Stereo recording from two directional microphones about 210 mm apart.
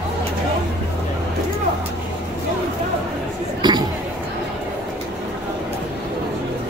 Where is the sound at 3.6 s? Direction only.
20° right (ahead or behind).